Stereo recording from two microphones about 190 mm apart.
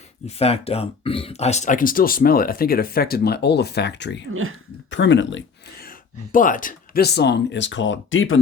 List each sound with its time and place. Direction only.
0.3 s speech: 35° left (ahead or behind); by 5.4 s 75° left (ahead or behind)
5.8 s speech: 45° left (ahead or behind); by 8.4 s 90° left